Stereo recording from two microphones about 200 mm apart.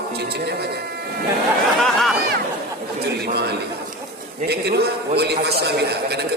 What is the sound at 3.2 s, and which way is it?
A man's voice, 55° right (ahead or behind).